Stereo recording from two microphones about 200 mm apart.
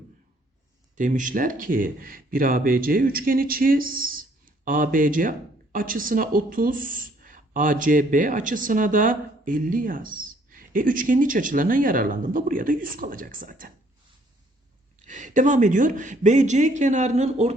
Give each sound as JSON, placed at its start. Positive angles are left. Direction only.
{"t": 0.9, "sound": "speech", "side_deg": -40}
{"t": 15.0, "sound": "speech", "side_deg": -40}